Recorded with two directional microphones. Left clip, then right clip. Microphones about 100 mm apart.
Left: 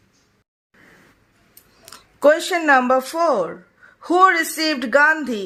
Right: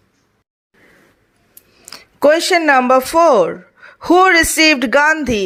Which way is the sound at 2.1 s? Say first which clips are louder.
Right 4 dB; 45° right (ahead or behind).